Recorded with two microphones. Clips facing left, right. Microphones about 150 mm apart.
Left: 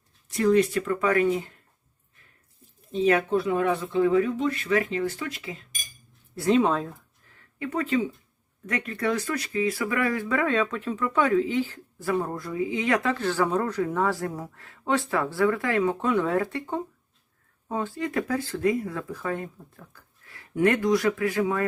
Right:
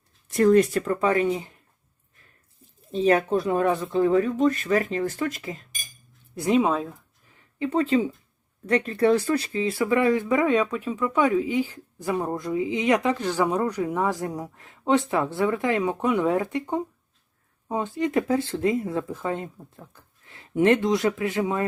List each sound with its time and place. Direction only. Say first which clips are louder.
0.3 s speech: right 3 dB; 50° right (ahead or behind)
1.0 s speech: left 1 dB; 25° right (ahead or behind)
2.9 s speech: right 1 dB; 35° right (ahead or behind)
6.3 s speech: even; 15° right (ahead or behind)
7.3 s a sound: right 5 dB; 25° right (ahead or behind)
8.6 s speech: right 7 dB; 30° right (ahead or behind)